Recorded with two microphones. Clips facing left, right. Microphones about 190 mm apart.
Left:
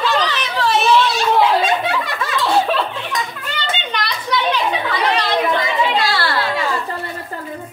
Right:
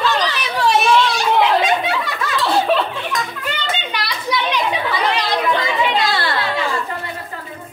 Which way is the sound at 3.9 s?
10° right (ahead or behind).